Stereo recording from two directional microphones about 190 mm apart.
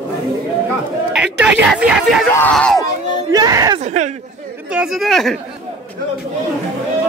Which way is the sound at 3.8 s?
40° right (ahead or behind).